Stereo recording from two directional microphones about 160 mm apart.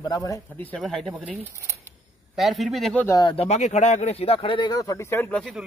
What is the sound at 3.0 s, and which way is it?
Speech, 25° left (ahead or behind).